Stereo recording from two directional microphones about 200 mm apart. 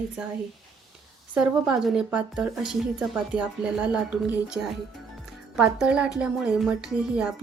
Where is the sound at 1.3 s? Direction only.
5° right (ahead or behind).